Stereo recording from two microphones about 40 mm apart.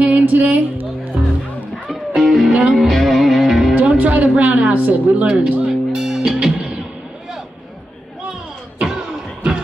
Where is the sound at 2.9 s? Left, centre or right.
Centre.